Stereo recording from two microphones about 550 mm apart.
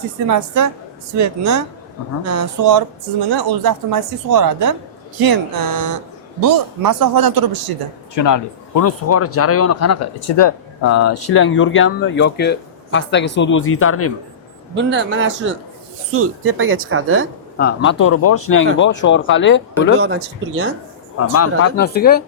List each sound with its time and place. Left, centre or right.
0.3 s a man's voice: right
8.1 s speech: left
14.8 s speech: centre
17.6 s speech: centre
20.0 s speech: right
21.3 s speech: left